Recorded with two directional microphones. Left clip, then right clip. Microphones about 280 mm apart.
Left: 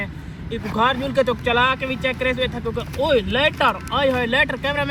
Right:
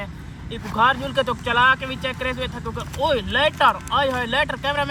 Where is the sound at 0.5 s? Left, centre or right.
Centre.